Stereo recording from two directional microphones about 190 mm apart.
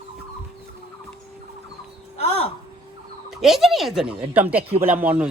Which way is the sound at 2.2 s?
30° left (ahead or behind).